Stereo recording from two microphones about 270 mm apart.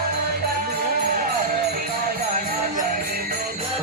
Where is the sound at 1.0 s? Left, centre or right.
Right.